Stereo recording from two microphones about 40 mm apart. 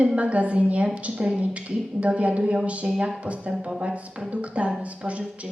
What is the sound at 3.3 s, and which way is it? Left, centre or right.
Speech, right.